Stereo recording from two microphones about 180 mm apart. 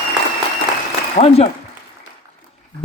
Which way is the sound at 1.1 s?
35° left (ahead or behind).